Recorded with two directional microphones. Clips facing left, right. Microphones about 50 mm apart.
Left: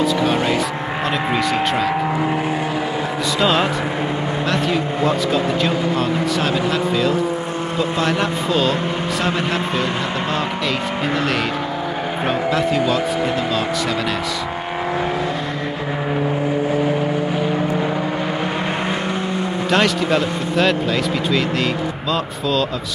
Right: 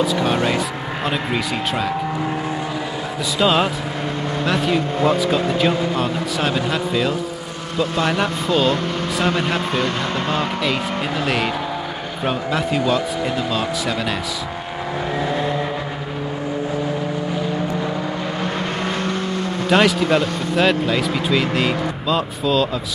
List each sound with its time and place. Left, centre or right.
1.0 s speech: centre
3.3 s speech: centre
7.7 s speech: centre
8.0 s speech: centre
9.7 s speech: centre
10.6 s speech: centre
19.7 s speech: centre